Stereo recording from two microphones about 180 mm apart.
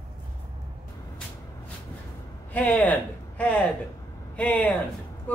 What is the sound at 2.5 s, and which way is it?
Speech, 10° left (ahead or behind).